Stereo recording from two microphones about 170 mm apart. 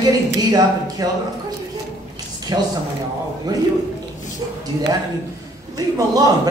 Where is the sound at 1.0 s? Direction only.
20° right (ahead or behind).